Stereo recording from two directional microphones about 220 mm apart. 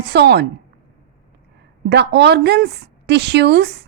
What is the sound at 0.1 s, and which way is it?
Speech, 50° right (ahead or behind).